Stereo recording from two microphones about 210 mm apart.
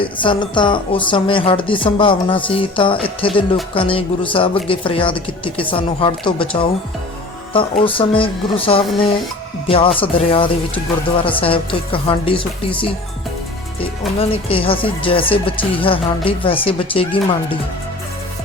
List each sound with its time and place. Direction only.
0.0 s speech: 25° left (ahead or behind)
7.5 s speech: 25° left (ahead or behind)
14.2 s speech: 25° left (ahead or behind)